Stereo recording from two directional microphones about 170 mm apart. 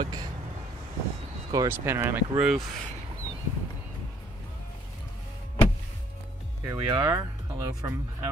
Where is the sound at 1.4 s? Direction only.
15° right (ahead or behind).